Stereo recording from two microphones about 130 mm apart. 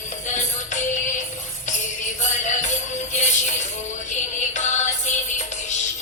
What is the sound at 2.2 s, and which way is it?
Music, 65° left (ahead or behind).